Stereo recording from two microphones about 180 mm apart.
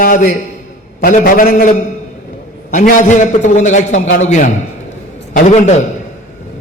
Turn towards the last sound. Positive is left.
turn(degrees=40)  # may be behind; listen again after turning